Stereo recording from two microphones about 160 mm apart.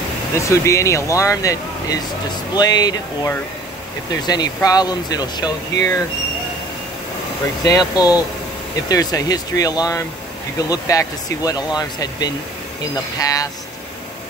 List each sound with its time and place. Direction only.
0.4 s speech: 20° left (ahead or behind)
7.6 s speech: 20° left (ahead or behind)